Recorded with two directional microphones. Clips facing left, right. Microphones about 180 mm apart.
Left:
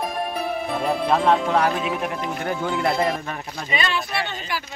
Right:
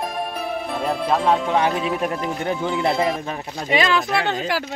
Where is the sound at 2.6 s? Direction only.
Centre (ahead or behind).